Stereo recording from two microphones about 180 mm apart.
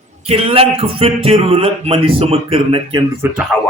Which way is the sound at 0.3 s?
30° right (ahead or behind).